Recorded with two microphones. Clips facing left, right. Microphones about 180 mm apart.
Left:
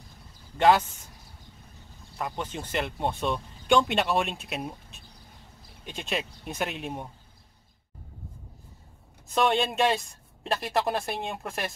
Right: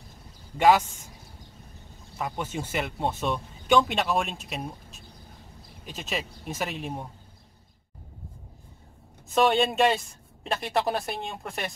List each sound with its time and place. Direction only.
0.6 s speech: 10° right (ahead or behind)
2.1 s speech: 5° right (ahead or behind)
9.3 s speech: centre (ahead or behind)